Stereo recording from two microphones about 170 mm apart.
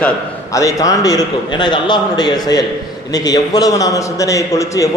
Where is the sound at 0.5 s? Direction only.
20° left (ahead or behind).